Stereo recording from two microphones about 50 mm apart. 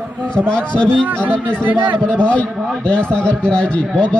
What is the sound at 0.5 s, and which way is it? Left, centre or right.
A man's voice, centre.